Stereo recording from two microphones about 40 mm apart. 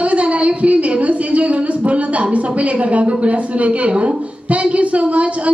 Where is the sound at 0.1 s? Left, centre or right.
Right.